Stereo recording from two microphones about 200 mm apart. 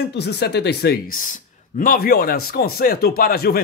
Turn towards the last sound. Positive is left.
turn(degrees=50)  # may be behind; listen again after turning